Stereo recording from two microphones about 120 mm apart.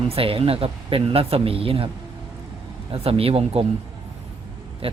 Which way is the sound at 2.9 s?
55° right (ahead or behind).